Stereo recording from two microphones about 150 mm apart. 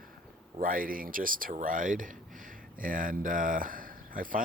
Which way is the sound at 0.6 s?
70° right (ahead or behind).